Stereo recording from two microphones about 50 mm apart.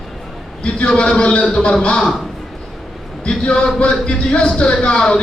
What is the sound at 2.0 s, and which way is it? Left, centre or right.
Speech, centre.